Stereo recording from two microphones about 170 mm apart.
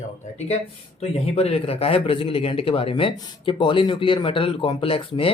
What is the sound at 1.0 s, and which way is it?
Speech, 35° left (ahead or behind).